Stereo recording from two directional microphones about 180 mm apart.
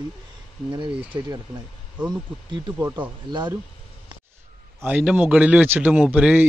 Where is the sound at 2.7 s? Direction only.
10° right (ahead or behind).